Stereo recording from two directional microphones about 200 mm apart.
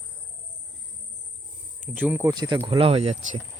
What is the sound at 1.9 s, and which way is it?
Speech, 5° right (ahead or behind).